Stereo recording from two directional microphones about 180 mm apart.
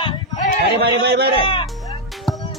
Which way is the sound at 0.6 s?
65° right (ahead or behind).